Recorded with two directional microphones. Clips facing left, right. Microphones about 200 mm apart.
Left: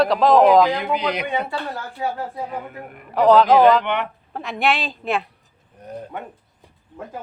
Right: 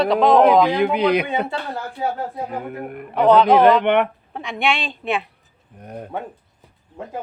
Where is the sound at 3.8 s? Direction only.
60° right (ahead or behind).